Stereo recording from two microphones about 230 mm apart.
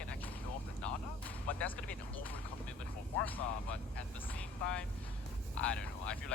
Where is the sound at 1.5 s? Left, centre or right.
Centre.